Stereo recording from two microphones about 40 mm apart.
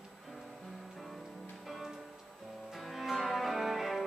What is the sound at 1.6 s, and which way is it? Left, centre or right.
Music, centre.